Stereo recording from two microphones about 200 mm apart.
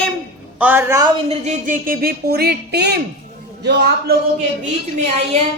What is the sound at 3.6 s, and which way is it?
Speech, 55° right (ahead or behind).